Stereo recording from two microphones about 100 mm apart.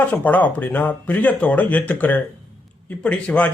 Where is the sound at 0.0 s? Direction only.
20° left (ahead or behind).